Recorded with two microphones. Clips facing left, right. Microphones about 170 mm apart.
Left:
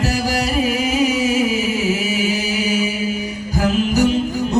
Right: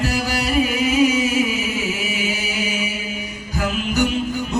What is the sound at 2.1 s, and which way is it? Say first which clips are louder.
Chant: left 5 dB; 40° left (ahead or behind).